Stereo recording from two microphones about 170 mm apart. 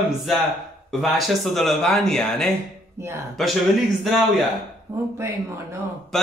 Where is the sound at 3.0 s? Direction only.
15° right (ahead or behind).